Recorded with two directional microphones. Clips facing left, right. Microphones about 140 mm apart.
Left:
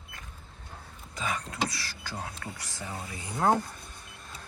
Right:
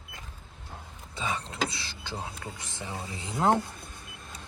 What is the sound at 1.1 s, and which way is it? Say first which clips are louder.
Speech: even; 25° right (ahead or behind).